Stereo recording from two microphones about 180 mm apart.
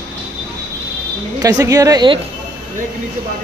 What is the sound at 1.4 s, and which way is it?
Speech, 20° right (ahead or behind).